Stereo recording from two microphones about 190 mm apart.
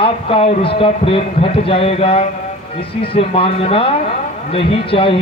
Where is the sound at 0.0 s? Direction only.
30° left (ahead or behind).